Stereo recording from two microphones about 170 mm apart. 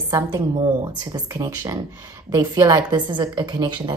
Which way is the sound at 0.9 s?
20° right (ahead or behind).